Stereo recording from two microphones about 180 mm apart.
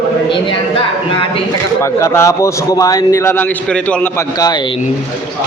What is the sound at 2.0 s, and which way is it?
Speech, 15° left (ahead or behind).